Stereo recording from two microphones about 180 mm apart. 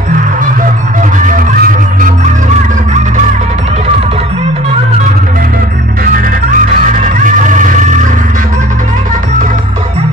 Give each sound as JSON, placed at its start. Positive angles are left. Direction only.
{"t": 1.2, "sound": "music", "side_deg": -50}
{"t": 6.9, "sound": "music", "side_deg": -45}